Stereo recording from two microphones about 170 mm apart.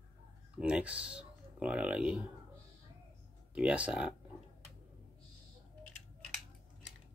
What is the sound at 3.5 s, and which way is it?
Speech, 5° right (ahead or behind).